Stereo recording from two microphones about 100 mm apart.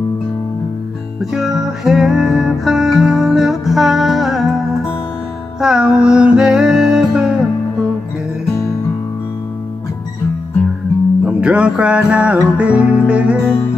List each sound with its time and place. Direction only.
1.2 s music: 5° right (ahead or behind)
5.6 s music: 5° right (ahead or behind)
11.2 s music: 10° right (ahead or behind)